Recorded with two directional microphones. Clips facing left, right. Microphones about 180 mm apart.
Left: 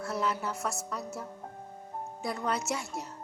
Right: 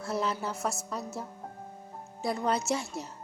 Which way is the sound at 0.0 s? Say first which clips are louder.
Right 1 dB; 30° right (ahead or behind).